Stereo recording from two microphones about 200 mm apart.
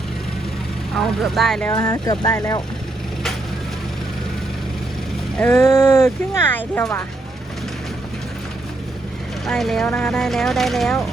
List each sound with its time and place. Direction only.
0.9 s speech: centre (ahead or behind)
1.7 s speech: 20° left (ahead or behind)
5.4 s speech: 10° left (ahead or behind)
9.5 s speech: centre (ahead or behind)